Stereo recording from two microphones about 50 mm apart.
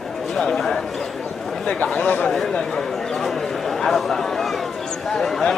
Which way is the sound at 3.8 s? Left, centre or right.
Centre.